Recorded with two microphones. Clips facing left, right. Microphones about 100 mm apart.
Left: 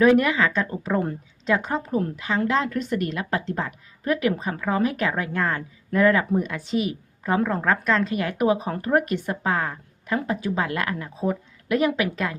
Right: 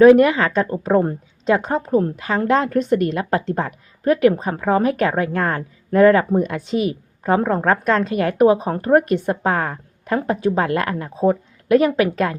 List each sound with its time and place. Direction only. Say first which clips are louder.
0.0 s a woman's voice: right 7 dB; 35° right (ahead or behind)